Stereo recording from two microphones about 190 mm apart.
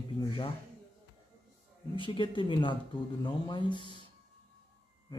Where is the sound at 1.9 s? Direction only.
25° left (ahead or behind).